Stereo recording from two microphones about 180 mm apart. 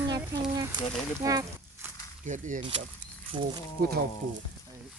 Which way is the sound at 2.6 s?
30° right (ahead or behind).